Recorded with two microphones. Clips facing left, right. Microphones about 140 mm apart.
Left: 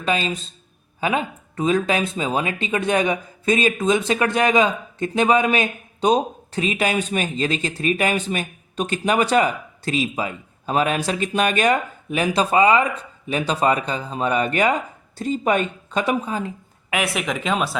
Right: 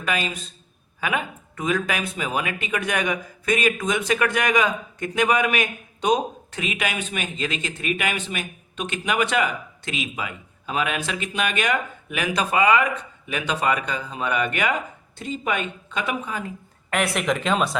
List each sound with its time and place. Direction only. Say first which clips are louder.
0.0 s a man's voice: left 4 dB; 30° left (ahead or behind)
16.9 s speech: right 1 dB; 5° left (ahead or behind)